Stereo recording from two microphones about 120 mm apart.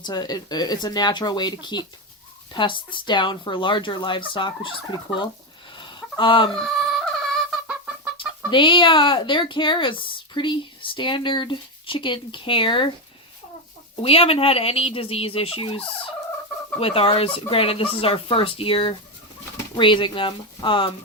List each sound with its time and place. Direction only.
0.0 s speech: 35° left (ahead or behind)
5.7 s a sound: 40° left (ahead or behind)
6.6 s music: 5° left (ahead or behind)
8.4 s speech: 45° left (ahead or behind)
14.0 s speech: 50° left (ahead or behind)
16.8 s speech: 50° left (ahead or behind)